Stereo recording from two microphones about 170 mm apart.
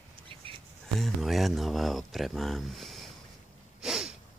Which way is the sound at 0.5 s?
30° right (ahead or behind).